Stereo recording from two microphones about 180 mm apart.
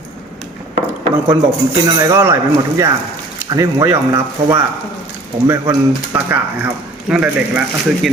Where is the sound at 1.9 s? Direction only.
15° right (ahead or behind).